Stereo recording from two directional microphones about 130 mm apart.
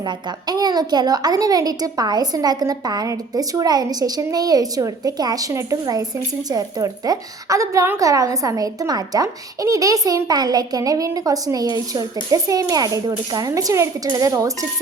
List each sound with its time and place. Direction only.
0.0 s a woman's voice: 30° right (ahead or behind)